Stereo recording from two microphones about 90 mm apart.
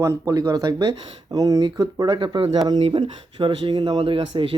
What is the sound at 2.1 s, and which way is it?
Speech, 70° right (ahead or behind).